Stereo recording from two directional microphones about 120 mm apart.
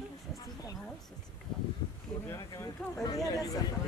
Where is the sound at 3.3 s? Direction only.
30° left (ahead or behind).